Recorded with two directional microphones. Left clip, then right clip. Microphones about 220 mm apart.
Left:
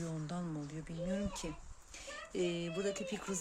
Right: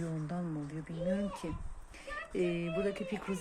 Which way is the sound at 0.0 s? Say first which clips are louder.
Right 3 dB; 20° left (ahead or behind).